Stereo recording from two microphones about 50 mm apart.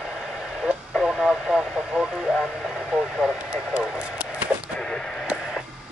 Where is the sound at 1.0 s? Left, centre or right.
Centre.